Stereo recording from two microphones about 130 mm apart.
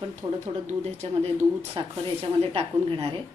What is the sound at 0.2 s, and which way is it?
Speech, 35° right (ahead or behind).